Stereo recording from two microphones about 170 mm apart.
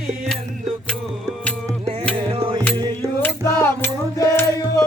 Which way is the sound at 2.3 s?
35° right (ahead or behind).